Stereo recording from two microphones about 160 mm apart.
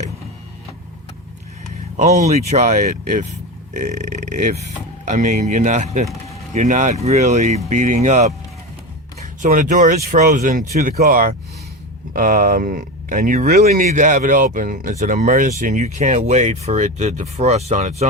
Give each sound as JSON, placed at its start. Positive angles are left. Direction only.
{"t": 2.0, "sound": "speech", "side_deg": -45}